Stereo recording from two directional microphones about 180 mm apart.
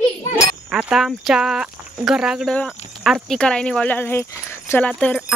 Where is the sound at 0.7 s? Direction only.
5° right (ahead or behind); by 4.8 s 15° left (ahead or behind).